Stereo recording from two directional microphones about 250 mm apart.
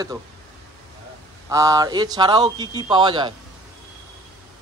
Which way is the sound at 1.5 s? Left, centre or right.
Centre.